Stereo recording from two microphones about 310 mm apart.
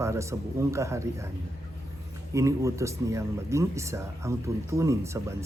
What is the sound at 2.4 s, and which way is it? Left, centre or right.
A man's voice, centre.